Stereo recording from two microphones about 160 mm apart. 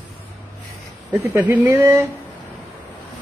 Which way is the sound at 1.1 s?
15° right (ahead or behind).